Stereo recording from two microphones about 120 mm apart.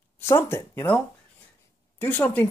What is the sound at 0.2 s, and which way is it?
Speech, 20° left (ahead or behind).